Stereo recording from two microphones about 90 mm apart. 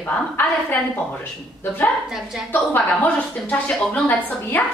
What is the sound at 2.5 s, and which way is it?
A woman's voice, 20° left (ahead or behind).